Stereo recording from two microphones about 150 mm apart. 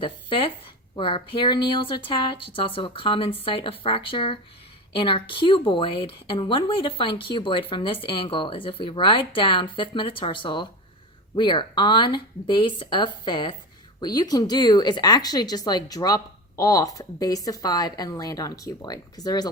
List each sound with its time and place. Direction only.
0.0 s a woman's voice: 35° left (ahead or behind)